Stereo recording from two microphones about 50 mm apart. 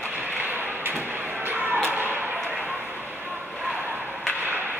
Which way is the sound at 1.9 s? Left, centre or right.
Right.